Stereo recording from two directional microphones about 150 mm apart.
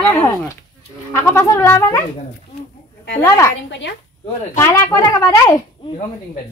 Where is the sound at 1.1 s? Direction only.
15° left (ahead or behind).